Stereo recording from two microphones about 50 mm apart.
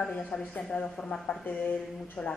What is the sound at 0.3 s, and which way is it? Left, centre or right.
Speech, left.